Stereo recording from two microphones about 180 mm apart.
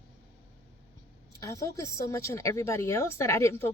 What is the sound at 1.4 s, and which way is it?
Speech, 20° left (ahead or behind).